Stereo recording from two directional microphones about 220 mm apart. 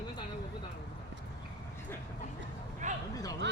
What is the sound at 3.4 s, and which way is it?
Speech, 50° right (ahead or behind).